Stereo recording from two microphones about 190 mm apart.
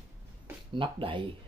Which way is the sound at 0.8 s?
25° right (ahead or behind).